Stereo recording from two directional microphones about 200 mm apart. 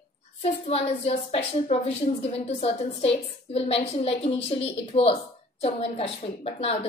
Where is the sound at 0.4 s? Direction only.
30° left (ahead or behind).